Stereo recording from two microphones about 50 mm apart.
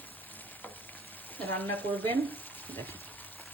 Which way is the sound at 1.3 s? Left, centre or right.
Left.